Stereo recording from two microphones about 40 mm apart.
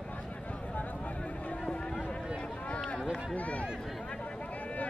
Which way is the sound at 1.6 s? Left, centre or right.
Centre.